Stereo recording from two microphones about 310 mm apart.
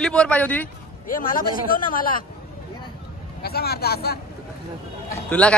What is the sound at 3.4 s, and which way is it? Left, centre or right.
Speech, left.